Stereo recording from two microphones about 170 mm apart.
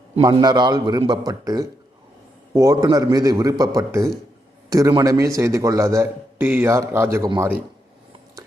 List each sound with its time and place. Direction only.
0.2 s a man's voice: 25° right (ahead or behind)